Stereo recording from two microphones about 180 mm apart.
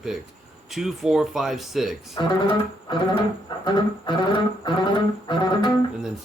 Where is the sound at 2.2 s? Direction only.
25° left (ahead or behind).